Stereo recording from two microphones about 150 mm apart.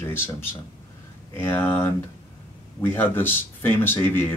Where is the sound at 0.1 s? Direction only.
15° left (ahead or behind).